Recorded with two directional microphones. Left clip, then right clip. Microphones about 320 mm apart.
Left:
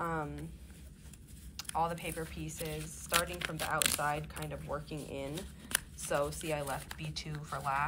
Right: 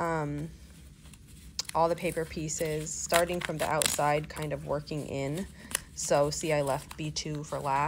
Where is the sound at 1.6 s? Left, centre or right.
Centre.